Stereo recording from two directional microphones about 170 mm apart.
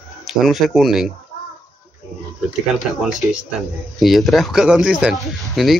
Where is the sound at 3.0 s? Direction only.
Centre (ahead or behind).